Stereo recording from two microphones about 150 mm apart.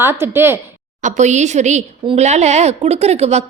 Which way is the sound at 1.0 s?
55° right (ahead or behind).